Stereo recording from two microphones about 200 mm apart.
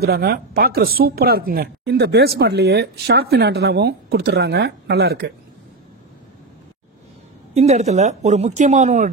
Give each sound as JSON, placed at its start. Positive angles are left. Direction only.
{"t": 0.0, "sound": "speech", "side_deg": -50}
{"t": 7.5, "sound": "speech", "side_deg": -35}